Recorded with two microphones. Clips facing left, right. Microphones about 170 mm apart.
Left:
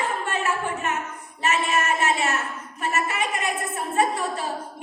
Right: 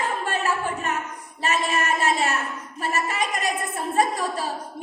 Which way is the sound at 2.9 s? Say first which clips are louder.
Even; 35° right (ahead or behind).